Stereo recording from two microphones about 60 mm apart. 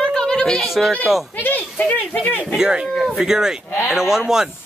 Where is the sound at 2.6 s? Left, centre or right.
Centre.